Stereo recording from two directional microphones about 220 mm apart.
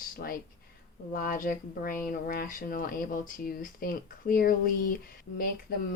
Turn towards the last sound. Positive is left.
turn(degrees=45)  # may be behind; listen again after turning